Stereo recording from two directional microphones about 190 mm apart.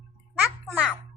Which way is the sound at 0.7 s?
Centre (ahead or behind).